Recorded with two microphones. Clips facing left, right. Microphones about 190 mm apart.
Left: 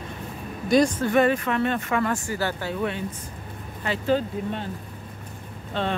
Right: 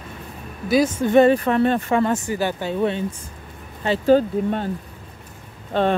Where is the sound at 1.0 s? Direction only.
25° right (ahead or behind).